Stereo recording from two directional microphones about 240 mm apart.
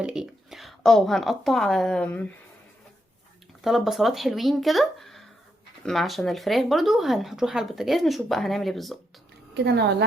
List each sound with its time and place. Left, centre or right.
0.0 s a woman's voice: centre
3.6 s speech: centre
9.6 s a woman's voice: right